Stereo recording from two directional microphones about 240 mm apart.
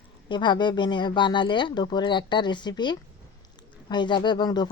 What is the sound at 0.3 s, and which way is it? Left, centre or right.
Speech, centre.